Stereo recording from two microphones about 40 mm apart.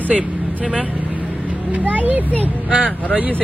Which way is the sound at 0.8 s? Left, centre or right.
Right.